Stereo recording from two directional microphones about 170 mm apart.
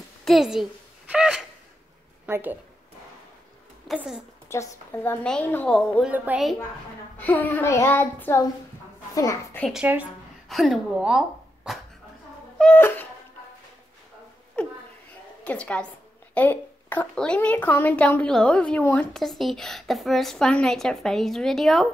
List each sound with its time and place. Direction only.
0.2 s a sound: centre (ahead or behind)
2.2 s speech: 10° right (ahead or behind)
3.8 s a child's voice: centre (ahead or behind)
4.5 s a woman's voice: 15° left (ahead or behind); by 6.5 s 5° right (ahead or behind)
7.2 s a woman's voice: 10° left (ahead or behind)
9.7 s a woman's voice: 5° right (ahead or behind)
12.5 s a sound: 10° left (ahead or behind)
14.6 s a sound: 10° left (ahead or behind)
15.4 s a woman's voice: 5° left (ahead or behind)